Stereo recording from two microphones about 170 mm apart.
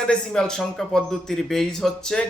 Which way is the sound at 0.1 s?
5° left (ahead or behind).